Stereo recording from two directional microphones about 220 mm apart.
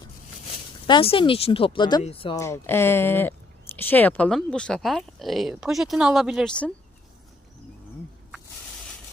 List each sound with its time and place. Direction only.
0.9 s speech: 20° left (ahead or behind)
2.4 s speech: 10° left (ahead or behind)